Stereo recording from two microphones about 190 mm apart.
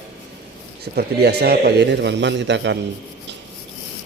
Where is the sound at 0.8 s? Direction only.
60° right (ahead or behind).